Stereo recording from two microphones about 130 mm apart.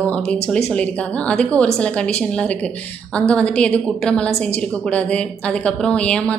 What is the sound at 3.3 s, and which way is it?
Speech, 5° left (ahead or behind).